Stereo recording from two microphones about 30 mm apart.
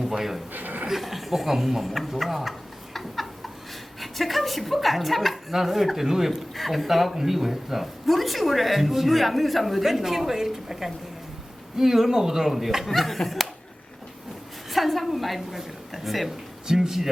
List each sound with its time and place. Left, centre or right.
0.0 s a sound: centre
0.5 s chuckle: right
0.9 s speech: centre
9.8 s a woman's voice: centre
14.7 s a woman's voice: centre
16.6 s a woman's voice: centre